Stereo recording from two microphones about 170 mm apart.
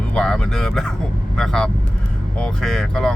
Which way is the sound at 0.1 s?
5° left (ahead or behind).